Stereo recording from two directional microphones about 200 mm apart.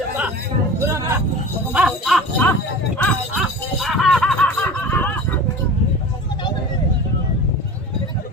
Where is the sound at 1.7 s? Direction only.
Centre (ahead or behind).